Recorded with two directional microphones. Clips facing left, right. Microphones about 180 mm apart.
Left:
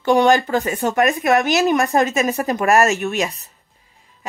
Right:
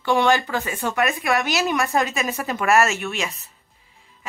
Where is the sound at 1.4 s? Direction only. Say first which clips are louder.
Left 6 dB; 20° left (ahead or behind).